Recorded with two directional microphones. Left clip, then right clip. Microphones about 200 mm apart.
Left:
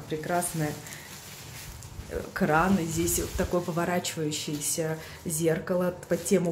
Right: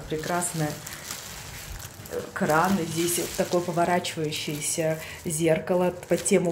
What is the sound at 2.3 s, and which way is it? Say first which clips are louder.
Speech: right 2 dB; 20° left (ahead or behind).